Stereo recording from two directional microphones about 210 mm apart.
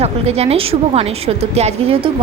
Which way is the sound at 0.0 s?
30° right (ahead or behind).